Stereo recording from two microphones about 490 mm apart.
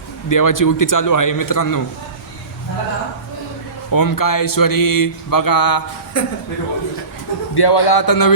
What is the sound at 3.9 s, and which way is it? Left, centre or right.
Speech, left.